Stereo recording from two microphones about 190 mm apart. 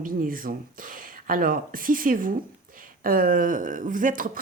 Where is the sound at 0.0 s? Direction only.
45° right (ahead or behind).